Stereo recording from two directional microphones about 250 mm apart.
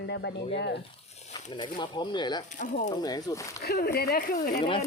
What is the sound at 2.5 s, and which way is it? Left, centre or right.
Speech, left.